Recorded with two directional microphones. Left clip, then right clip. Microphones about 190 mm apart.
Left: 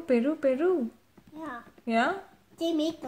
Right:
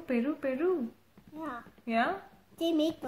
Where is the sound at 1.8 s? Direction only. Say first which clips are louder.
Left 3 dB; 35° left (ahead or behind).